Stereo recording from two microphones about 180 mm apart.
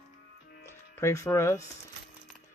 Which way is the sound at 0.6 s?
15° left (ahead or behind).